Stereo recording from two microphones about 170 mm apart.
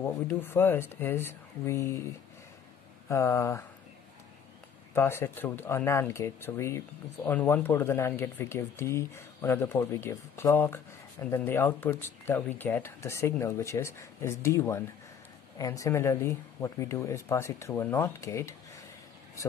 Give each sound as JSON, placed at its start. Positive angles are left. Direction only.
{"t": 0.0, "sound": "speech", "side_deg": 10}
{"t": 3.1, "sound": "speech", "side_deg": 15}
{"t": 4.9, "sound": "speech", "side_deg": 15}